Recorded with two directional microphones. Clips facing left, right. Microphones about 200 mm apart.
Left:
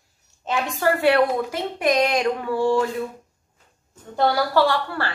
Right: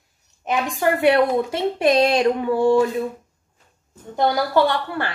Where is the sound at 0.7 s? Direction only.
20° right (ahead or behind).